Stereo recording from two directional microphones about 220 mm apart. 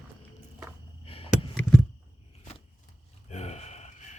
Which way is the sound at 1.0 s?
25° left (ahead or behind).